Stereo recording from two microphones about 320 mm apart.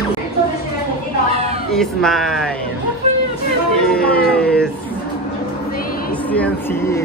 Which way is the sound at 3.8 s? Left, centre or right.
Centre.